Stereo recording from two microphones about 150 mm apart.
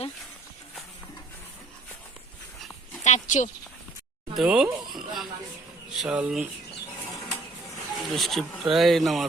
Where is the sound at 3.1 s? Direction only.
55° left (ahead or behind).